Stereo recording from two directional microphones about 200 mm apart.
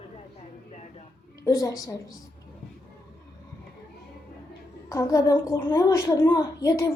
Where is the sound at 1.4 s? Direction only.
15° left (ahead or behind).